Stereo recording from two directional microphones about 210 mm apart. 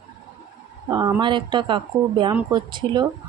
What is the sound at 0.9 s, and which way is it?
Speech, 15° right (ahead or behind).